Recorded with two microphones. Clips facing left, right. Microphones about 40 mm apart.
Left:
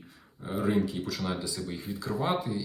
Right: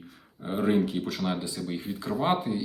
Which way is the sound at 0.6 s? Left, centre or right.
Right.